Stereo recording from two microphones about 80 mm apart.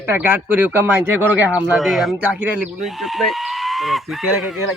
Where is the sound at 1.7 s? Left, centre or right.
Centre.